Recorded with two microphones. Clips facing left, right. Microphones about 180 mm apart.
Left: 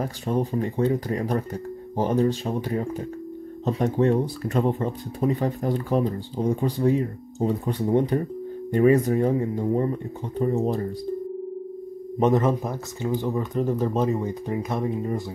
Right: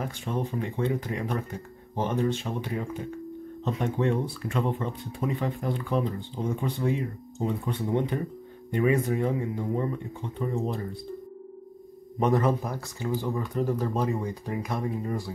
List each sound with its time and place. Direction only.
0.0 s speech: 40° left (ahead or behind)
12.2 s speech: 20° left (ahead or behind)